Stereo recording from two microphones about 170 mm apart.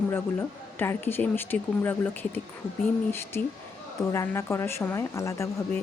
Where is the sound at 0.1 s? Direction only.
15° left (ahead or behind).